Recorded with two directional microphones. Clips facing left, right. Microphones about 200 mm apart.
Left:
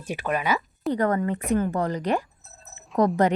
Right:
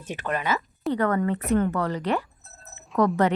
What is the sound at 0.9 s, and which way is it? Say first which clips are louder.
Speech: even; 35° left (ahead or behind).